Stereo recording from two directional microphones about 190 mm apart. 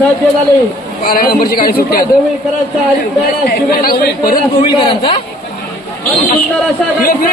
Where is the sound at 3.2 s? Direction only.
50° left (ahead or behind).